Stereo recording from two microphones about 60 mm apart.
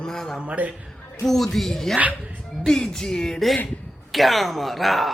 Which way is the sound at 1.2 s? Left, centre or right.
Centre.